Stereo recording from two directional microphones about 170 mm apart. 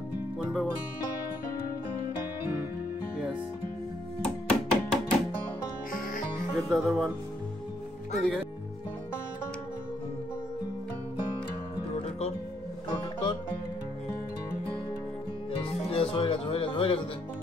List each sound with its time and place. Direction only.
0.4 s music: centre (ahead or behind)
4.2 s music: 5° left (ahead or behind)
6.7 s speech: centre (ahead or behind)
8.1 s speech: centre (ahead or behind)
11.9 s music: 40° left (ahead or behind)
15.5 s music: 35° left (ahead or behind)